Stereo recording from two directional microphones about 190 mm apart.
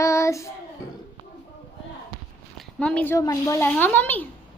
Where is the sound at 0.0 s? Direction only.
15° left (ahead or behind).